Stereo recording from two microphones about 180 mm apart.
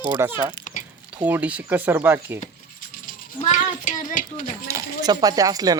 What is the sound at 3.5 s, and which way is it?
A child's voice, 45° left (ahead or behind).